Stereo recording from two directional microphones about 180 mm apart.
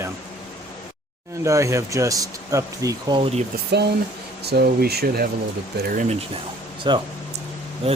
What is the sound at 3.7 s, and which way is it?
Speech, 65° right (ahead or behind).